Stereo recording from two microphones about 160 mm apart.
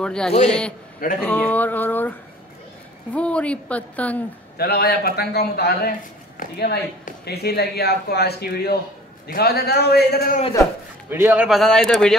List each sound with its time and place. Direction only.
0.0 s a man's voice: 5° left (ahead or behind)
4.6 s a man's voice: 80° left
7.2 s a man's voice: 85° left
11.1 s a man's voice: 15° right (ahead or behind); by 12.2 s centre (ahead or behind)